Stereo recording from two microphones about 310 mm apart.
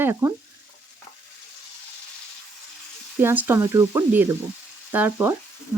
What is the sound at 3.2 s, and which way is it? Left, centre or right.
Speech, centre.